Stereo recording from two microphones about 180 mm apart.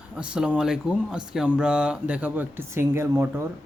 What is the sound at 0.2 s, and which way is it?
Speech, 5° right (ahead or behind).